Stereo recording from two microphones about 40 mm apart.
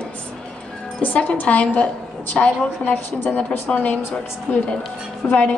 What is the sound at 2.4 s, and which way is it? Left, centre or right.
Speech, left.